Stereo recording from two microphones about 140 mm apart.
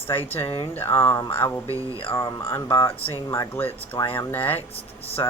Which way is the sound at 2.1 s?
20° left (ahead or behind).